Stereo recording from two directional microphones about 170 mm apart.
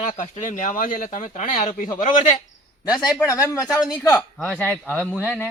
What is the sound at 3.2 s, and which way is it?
Speech, 20° left (ahead or behind).